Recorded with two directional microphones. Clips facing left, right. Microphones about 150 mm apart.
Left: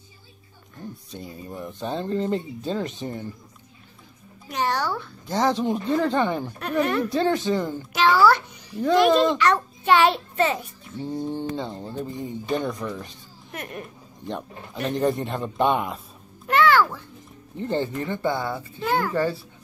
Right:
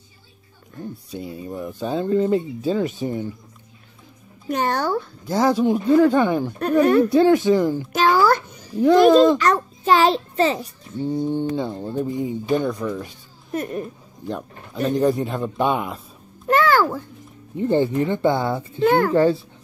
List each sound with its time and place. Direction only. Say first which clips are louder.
1.1 s speech: right 7 dB; 5° right (ahead or behind)
4.5 s a child's voice: right 4 dB; 50° right (ahead or behind)
5.3 s speech: right 4 dB; 5° right (ahead or behind)
6.6 s speech: right 8 dB; 40° right (ahead or behind)
7.1 s speech: right 7 dB; 10° right (ahead or behind)
7.9 s babbling: even; 45° right (ahead or behind)
9.4 s a child's voice: right 2 dB; 40° right (ahead or behind)
11.1 s speech: right 6 dB; centre (ahead or behind)
13.5 s speech: right 9 dB; 35° right (ahead or behind)
14.2 s speech: right 3 dB; 5° right (ahead or behind)
16.4 s a sound: right 2 dB; 40° right (ahead or behind)
17.6 s speech: right 7 dB; 15° right (ahead or behind)
18.9 s a child's voice: right 7 dB; 55° right (ahead or behind)